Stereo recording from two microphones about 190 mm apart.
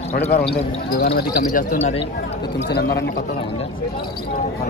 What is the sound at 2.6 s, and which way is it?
Speech, 65° left (ahead or behind).